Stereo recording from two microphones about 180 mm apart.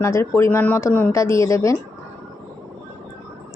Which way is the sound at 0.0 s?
15° left (ahead or behind).